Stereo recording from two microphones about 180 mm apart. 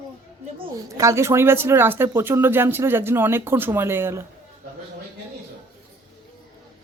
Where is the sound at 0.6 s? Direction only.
20° right (ahead or behind).